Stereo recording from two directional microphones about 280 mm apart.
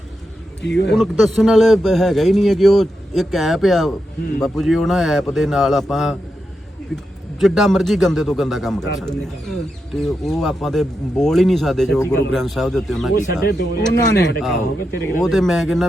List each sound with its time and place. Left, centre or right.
0.6 s speech: left
0.9 s speech: centre
13.5 s speech: left
15.2 s speech: centre